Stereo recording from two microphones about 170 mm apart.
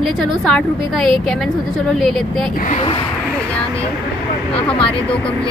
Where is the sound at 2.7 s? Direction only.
40° left (ahead or behind).